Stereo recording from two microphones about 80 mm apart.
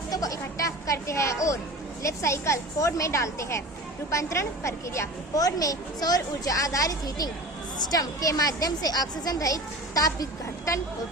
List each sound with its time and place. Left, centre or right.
0.1 s a woman's voice: left